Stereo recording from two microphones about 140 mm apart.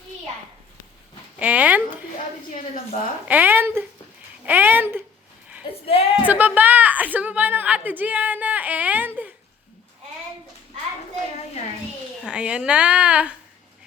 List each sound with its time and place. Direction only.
1.4 s a woman's voice: 10° right (ahead or behind)
3.2 s a woman's voice: 15° right (ahead or behind)
5.8 s speech: 45° left (ahead or behind)
6.2 s a woman's voice: 10° right (ahead or behind)
12.2 s a woman's voice: 5° right (ahead or behind)